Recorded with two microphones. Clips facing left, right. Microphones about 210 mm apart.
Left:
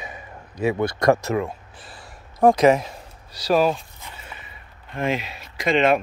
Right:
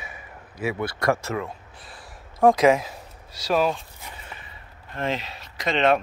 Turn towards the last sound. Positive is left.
turn(degrees=10)  # may be behind; listen again after turning